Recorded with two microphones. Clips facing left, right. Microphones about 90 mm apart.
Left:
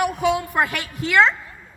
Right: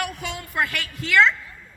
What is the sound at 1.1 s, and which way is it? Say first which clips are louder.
Speech: left 1 dB; 30° left (ahead or behind).